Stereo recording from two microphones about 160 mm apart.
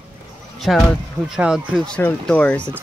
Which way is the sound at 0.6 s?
Centre (ahead or behind).